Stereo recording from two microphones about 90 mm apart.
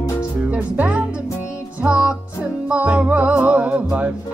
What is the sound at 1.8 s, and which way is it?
Music, 10° right (ahead or behind).